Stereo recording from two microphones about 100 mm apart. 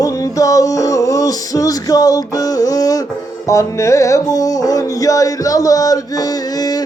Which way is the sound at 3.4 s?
30° left (ahead or behind).